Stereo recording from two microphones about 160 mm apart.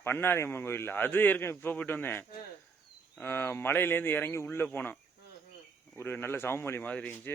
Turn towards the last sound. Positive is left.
turn(degrees=10)  # may be behind; listen again after turning